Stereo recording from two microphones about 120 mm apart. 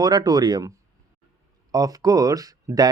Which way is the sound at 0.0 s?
35° right (ahead or behind).